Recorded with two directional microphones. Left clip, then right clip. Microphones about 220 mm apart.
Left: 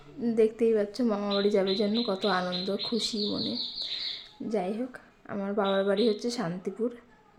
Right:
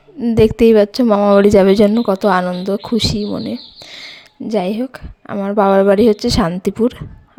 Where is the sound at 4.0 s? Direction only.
45° right (ahead or behind).